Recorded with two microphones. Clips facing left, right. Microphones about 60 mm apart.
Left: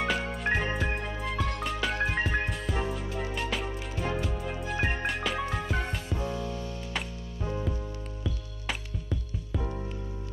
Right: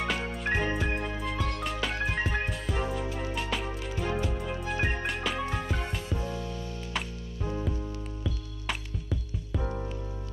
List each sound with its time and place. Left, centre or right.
0.0 s music: centre
6.1 s music: left
8.2 s music: centre